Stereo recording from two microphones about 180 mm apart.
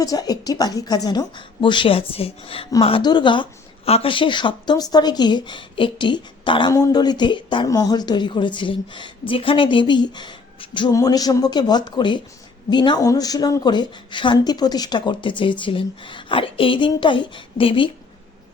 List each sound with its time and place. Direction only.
0.0 s a woman's voice: 20° left (ahead or behind)